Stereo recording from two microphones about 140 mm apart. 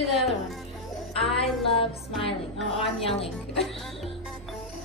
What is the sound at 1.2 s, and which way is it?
Music, 40° left (ahead or behind).